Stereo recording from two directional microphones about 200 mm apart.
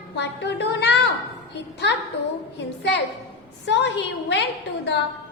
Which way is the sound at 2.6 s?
60° left (ahead or behind).